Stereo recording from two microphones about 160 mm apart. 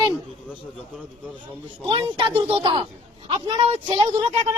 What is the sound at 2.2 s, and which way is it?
Speech, 30° right (ahead or behind).